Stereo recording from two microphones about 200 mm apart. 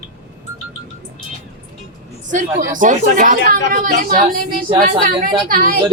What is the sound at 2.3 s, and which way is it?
A woman's voice, 40° right (ahead or behind).